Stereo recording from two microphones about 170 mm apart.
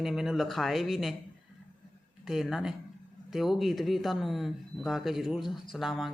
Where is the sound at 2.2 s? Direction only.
Centre (ahead or behind).